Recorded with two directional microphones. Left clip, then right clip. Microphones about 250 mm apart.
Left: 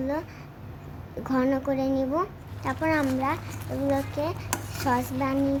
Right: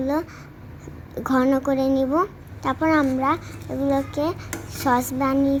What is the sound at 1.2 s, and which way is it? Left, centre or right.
A woman's voice, centre.